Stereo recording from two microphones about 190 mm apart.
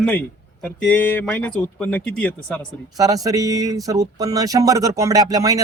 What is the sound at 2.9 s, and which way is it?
Speech, 20° right (ahead or behind).